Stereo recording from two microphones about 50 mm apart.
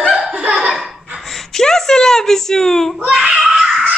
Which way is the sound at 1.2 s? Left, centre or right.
Centre.